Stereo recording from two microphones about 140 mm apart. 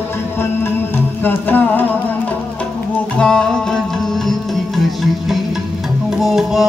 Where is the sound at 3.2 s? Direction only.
5° left (ahead or behind).